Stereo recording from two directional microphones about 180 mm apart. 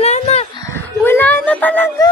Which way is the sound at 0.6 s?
15° left (ahead or behind).